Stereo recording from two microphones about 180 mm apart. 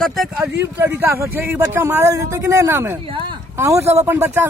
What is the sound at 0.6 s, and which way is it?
Speech, 10° right (ahead or behind).